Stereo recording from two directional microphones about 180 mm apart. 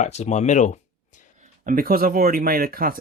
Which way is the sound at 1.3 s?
45° right (ahead or behind).